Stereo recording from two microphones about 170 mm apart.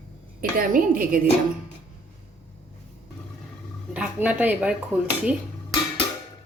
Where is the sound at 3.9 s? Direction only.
5° right (ahead or behind).